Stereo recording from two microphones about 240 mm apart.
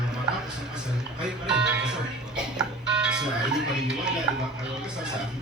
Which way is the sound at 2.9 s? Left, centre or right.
Centre.